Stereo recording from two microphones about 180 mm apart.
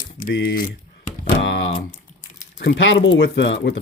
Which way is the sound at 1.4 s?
85° left.